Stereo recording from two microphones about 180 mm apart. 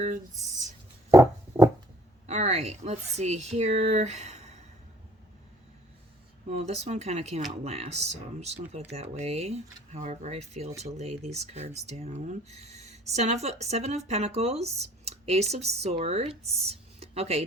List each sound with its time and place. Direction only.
1.1 s music: 15° right (ahead or behind)
2.2 s speech: 40° right (ahead or behind)
6.5 s speech: 40° right (ahead or behind)
16.6 s a sound: 35° right (ahead or behind)